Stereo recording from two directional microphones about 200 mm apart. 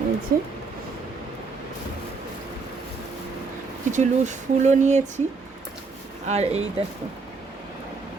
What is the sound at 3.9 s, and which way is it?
Speech, 35° right (ahead or behind).